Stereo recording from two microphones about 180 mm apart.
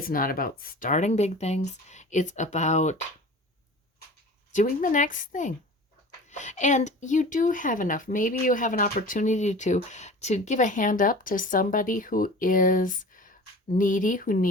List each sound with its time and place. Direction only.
0.0 s speech: 50° left (ahead or behind)
4.5 s speech: 50° left (ahead or behind)